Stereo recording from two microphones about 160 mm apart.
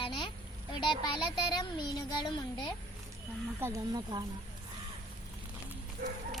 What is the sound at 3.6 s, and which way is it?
Speech, 25° right (ahead or behind).